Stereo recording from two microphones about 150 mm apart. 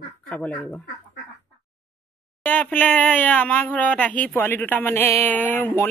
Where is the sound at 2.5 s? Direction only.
10° left (ahead or behind).